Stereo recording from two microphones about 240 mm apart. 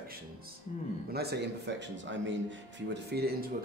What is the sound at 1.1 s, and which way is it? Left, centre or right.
Speech, right.